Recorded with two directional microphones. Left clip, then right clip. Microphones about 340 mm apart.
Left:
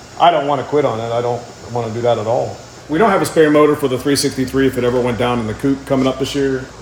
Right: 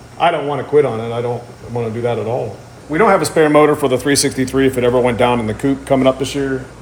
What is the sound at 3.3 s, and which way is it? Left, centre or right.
Speech, centre.